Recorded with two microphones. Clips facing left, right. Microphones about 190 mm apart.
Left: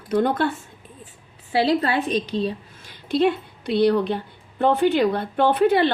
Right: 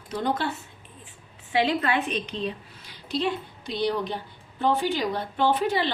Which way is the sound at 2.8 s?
55° left (ahead or behind).